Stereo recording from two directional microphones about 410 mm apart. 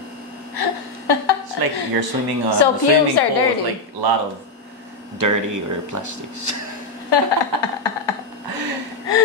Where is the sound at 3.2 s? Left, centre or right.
Left.